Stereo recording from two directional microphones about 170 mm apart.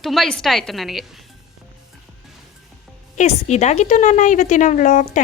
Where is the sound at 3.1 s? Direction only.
45° left (ahead or behind).